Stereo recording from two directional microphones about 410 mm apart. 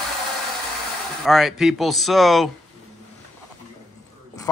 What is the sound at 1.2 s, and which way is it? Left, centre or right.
Speech, centre.